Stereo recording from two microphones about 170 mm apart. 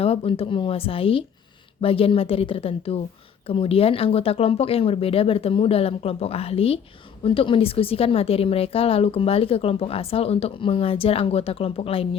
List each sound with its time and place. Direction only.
0.0 s a woman's voice: 35° left (ahead or behind)